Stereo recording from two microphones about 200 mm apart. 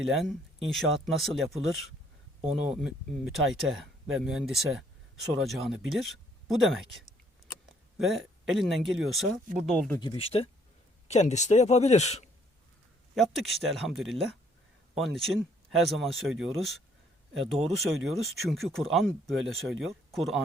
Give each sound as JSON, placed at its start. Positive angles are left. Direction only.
{"t": 0.0, "sound": "speech", "side_deg": 0}
{"t": 10.0, "sound": "speech", "side_deg": 25}
{"t": 13.1, "sound": "speech", "side_deg": 0}